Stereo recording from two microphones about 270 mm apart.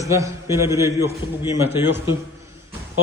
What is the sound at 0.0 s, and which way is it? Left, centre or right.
A man's voice, centre.